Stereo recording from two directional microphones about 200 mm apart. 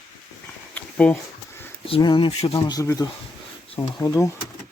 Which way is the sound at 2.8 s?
15° left (ahead or behind).